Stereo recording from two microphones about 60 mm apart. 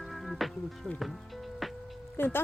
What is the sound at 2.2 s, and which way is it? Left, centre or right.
Speech, left.